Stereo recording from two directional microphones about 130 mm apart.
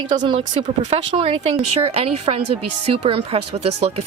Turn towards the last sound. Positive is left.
turn(degrees=-50)  # may be behind; listen again after turning